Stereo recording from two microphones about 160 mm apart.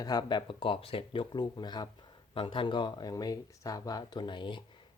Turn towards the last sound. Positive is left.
turn(degrees=30)  # may be behind; listen again after turning